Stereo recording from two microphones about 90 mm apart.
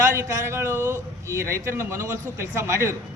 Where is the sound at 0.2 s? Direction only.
30° right (ahead or behind).